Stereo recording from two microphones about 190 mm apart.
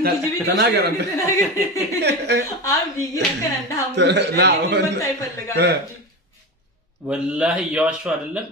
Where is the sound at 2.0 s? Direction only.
65° right (ahead or behind).